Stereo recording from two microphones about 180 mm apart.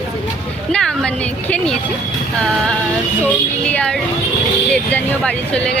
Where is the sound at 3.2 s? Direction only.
10° left (ahead or behind).